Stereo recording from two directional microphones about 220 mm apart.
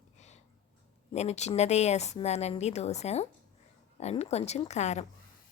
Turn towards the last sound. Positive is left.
turn(degrees=30)  # may be behind; listen again after turning